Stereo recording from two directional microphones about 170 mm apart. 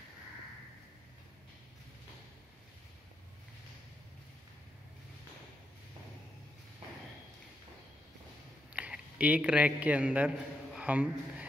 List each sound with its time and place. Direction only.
8.7 s a man's voice: 10° right (ahead or behind)